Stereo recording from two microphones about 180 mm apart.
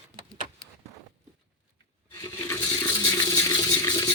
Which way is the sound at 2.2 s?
20° left (ahead or behind).